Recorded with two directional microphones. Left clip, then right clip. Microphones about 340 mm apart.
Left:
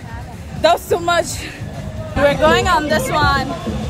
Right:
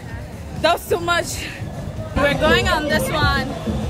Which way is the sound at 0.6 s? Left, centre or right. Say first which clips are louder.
Left 4 dB; centre.